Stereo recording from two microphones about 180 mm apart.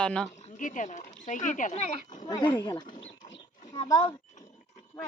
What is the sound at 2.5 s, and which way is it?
Speech, 25° left (ahead or behind).